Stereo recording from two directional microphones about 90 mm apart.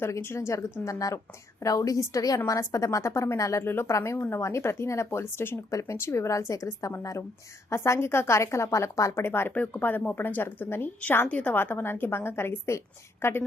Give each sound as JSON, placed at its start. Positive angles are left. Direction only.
{"t": 0.0, "sound": "speech", "side_deg": 30}